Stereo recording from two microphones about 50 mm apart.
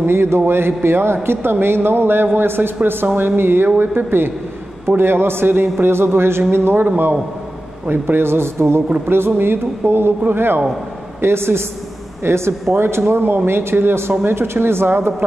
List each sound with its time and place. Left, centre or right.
0.0 s a man's voice: right
7.9 s a man's voice: right